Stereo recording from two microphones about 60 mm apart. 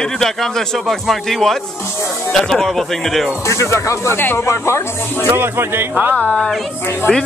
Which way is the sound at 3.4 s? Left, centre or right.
Left.